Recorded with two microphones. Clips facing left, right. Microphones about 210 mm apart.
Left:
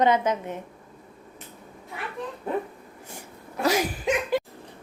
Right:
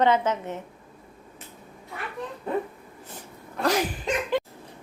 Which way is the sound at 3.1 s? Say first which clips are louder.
Even; 10° left (ahead or behind).